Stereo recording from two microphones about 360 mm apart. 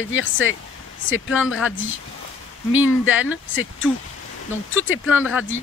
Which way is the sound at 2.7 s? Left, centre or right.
Left.